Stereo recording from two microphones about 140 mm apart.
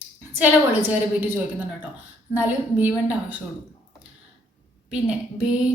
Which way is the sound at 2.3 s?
10° right (ahead or behind).